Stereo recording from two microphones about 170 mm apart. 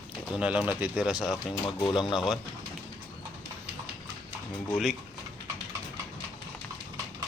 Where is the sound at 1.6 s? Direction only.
25° left (ahead or behind).